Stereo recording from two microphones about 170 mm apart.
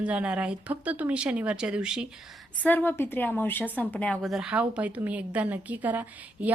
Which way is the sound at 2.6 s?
10° left (ahead or behind).